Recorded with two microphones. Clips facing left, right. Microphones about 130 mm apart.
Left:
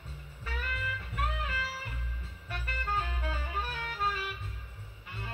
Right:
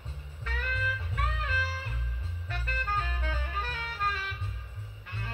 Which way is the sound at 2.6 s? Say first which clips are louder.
Right 1 dB; 10° left (ahead or behind).